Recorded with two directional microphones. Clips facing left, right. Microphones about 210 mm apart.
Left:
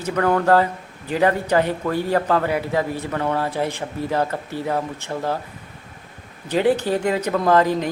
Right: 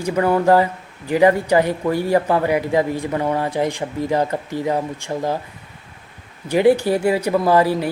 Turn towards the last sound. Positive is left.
turn(degrees=-10)  # may be behind; listen again after turning